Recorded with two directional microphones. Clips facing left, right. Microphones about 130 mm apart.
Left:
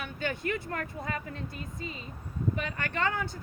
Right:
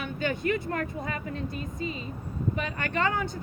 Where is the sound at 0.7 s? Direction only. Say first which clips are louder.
Right 3 dB; 25° right (ahead or behind).